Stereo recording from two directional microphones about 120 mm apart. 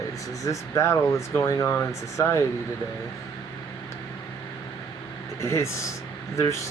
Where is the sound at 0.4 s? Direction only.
25° left (ahead or behind).